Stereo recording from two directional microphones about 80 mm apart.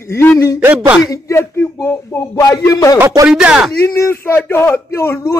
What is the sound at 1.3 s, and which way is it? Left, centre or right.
Speech, left.